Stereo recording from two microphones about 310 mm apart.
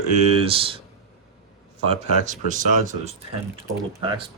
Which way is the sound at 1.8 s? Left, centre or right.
Right.